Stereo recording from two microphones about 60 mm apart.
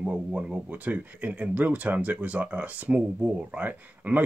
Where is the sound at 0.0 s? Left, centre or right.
Centre.